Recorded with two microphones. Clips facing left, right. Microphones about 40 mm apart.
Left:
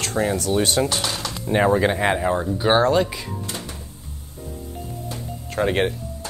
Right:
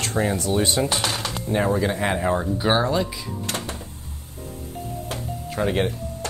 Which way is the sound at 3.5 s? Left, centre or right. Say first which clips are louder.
Right 3 dB; right.